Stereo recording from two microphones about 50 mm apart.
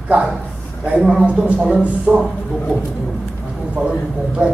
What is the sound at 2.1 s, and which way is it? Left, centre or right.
Speech, right.